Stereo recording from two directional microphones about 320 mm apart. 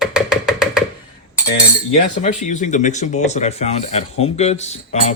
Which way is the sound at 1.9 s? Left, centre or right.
Left.